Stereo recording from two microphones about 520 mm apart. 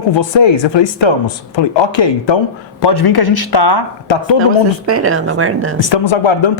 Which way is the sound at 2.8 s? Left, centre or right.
Left.